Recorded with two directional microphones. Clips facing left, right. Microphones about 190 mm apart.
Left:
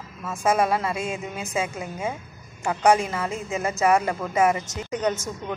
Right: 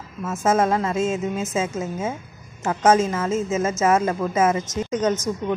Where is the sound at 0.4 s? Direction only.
20° right (ahead or behind).